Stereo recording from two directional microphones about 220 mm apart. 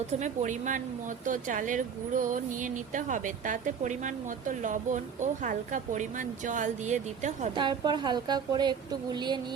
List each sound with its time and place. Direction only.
0.1 s speech: 35° right (ahead or behind)
7.5 s speech: 20° right (ahead or behind)